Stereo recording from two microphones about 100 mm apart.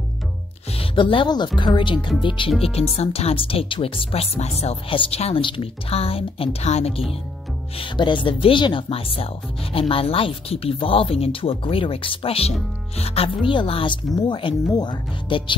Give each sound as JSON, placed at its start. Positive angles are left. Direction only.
{"t": 0.7, "sound": "speech", "side_deg": 60}
{"t": 2.6, "sound": "speech", "side_deg": 85}
{"t": 7.8, "sound": "speech", "side_deg": 55}
{"t": 12.9, "sound": "speech", "side_deg": 90}
{"t": 13.5, "sound": "speech", "side_deg": 60}